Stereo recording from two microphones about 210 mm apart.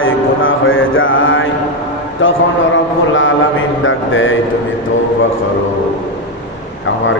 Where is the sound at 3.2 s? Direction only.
65° left (ahead or behind).